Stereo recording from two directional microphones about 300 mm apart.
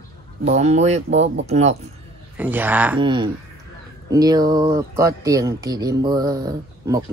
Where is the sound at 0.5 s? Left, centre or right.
Right.